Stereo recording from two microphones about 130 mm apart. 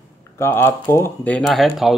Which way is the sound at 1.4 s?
Centre (ahead or behind).